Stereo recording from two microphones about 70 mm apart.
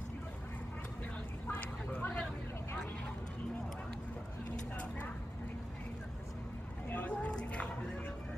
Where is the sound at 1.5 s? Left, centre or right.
Left.